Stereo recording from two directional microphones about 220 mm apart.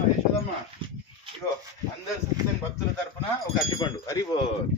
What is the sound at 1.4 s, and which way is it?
Speech, 15° left (ahead or behind).